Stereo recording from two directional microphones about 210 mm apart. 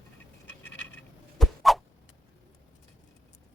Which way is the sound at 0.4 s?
10° left (ahead or behind).